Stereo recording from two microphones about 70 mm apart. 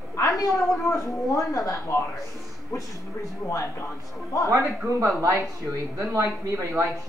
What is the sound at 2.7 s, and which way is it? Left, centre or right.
Speech, left.